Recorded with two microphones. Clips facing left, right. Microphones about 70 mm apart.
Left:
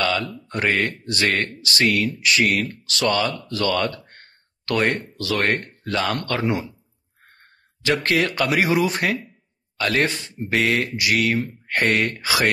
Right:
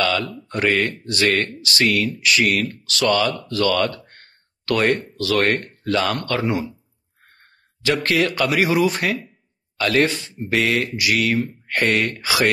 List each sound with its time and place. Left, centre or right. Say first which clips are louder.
0.0 s speech: right 2 dB; left
7.8 s speech: right 1 dB; left